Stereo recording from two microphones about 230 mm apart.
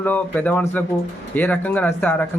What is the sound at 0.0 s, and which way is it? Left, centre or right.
Speech, centre.